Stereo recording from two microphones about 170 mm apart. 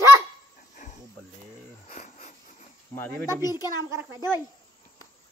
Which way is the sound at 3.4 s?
20° left (ahead or behind).